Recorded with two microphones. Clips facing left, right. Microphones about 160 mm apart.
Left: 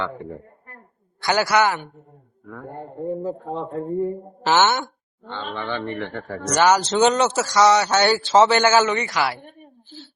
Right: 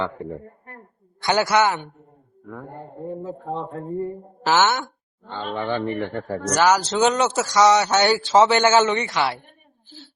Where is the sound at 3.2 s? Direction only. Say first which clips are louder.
Left 2 dB; 5° left (ahead or behind).